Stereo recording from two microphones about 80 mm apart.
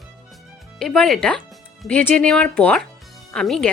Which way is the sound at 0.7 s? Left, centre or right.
Centre.